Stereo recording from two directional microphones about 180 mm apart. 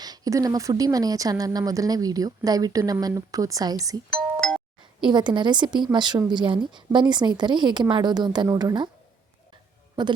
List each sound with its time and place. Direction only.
0.0 s speech: 20° right (ahead or behind)
4.1 s doorbell: 5° left (ahead or behind)
5.0 s speech: 25° right (ahead or behind)
10.0 s speech: 25° right (ahead or behind)